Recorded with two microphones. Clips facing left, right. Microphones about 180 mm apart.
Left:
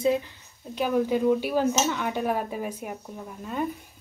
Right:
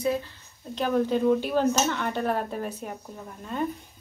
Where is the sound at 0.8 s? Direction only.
10° left (ahead or behind).